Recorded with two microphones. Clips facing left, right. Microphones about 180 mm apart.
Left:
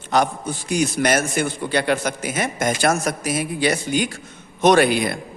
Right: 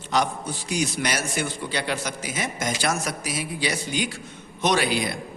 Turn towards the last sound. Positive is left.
turn(degrees=55)  # may be behind; listen again after turning